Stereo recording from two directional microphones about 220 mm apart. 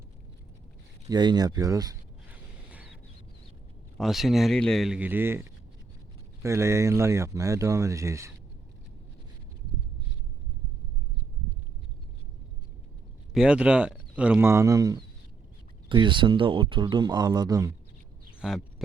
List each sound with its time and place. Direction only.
1.0 s speech: 20° right (ahead or behind)
3.9 s speech: centre (ahead or behind)
13.3 s speech: 5° right (ahead or behind)
18.3 s a sound: centre (ahead or behind)